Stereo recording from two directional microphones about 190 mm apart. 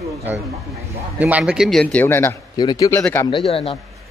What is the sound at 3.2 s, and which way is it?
Speech, 30° left (ahead or behind).